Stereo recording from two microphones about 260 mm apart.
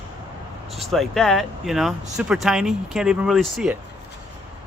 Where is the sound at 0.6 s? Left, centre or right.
Centre.